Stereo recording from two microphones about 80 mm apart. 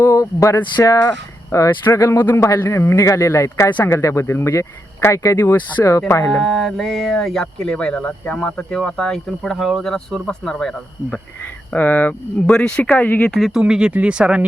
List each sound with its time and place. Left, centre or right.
0.2 s a sound: left
0.5 s speech: left
1.5 s speech: left
3.7 s speech: left
3.9 s speech: left
5.4 s speech: left
6.4 s speech: centre
11.7 s speech: centre
12.5 s speech: centre
12.8 s speech: centre
13.3 s speech: centre
13.6 s speech: centre